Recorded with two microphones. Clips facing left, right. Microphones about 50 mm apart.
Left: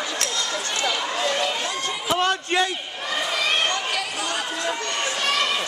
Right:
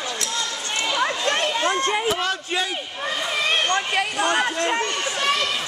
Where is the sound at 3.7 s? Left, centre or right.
Right.